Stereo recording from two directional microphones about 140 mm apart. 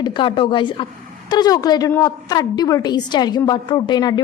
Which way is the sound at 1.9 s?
15° left (ahead or behind).